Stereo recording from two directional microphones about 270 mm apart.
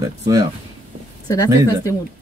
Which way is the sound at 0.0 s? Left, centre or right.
Centre.